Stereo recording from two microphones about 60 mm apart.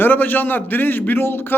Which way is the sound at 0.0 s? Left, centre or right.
Left.